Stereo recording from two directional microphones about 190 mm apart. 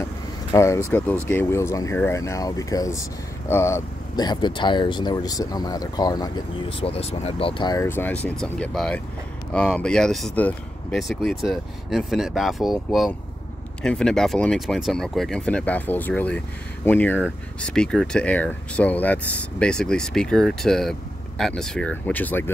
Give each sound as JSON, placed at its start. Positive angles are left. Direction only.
{"t": 0.5, "sound": "speech", "side_deg": 15}